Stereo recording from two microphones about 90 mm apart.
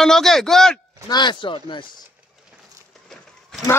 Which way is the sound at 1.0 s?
55° left (ahead or behind).